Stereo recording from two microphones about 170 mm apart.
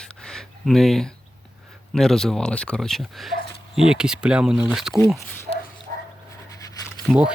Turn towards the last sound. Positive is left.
turn(degrees=-5)  # may be behind; listen again after turning